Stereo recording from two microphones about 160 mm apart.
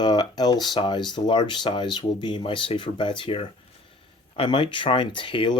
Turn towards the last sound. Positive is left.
turn(degrees=30)  # may be behind; listen again after turning